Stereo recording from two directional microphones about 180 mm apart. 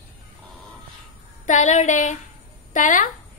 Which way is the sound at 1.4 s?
45° left (ahead or behind).